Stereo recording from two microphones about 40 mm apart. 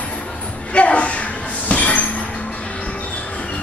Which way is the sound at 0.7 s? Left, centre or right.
Left.